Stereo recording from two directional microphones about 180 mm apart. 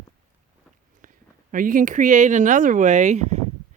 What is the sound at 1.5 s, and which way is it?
Speech, 50° right (ahead or behind).